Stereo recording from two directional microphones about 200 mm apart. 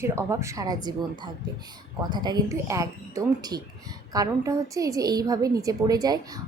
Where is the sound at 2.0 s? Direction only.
20° right (ahead or behind).